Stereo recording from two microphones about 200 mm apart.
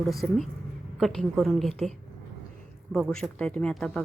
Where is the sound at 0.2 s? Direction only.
5° left (ahead or behind).